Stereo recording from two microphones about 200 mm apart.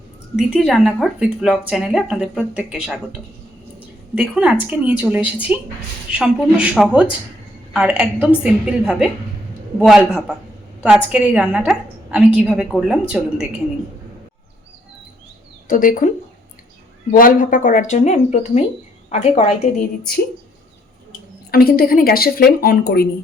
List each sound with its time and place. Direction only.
0.3 s a woman's voice: 5° right (ahead or behind)
4.1 s a woman's voice: 5° right (ahead or behind)
15.6 s speech: 40° left (ahead or behind)
17.1 s speech: 45° left (ahead or behind)
21.5 s speech: 50° left (ahead or behind)